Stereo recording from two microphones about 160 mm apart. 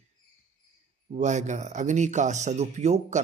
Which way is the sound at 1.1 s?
50° right (ahead or behind).